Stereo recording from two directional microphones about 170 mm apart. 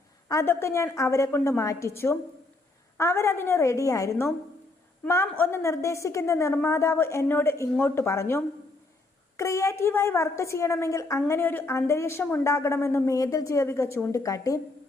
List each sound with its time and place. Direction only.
0.3 s a woman's voice: 15° left (ahead or behind)